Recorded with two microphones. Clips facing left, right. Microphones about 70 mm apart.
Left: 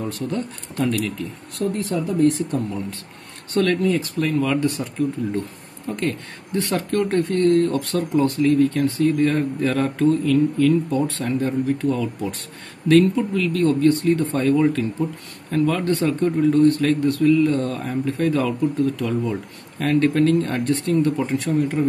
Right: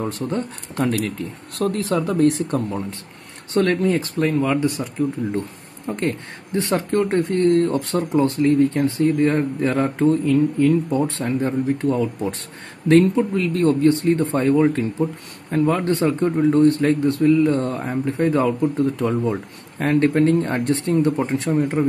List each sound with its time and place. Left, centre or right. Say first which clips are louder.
0.0 s speech: right 2 dB; right
0.8 s speech: right 1 dB; right
1.8 s speech: right 3 dB; right
2.1 s speech: left 1 dB; right
3.7 s speech: right 1 dB; right
4.6 s speech: right 1 dB; centre
5.9 s speech: right 1 dB; right